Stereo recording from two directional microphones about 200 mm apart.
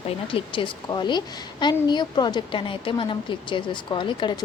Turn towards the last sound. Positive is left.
turn(degrees=25)  # may be behind; listen again after turning